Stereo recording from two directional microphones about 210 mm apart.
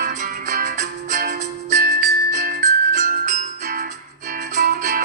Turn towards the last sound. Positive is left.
turn(degrees=-40)  # may be behind; listen again after turning